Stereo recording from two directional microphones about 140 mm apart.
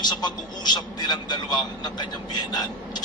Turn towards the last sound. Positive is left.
turn(degrees=30)  # may be behind; listen again after turning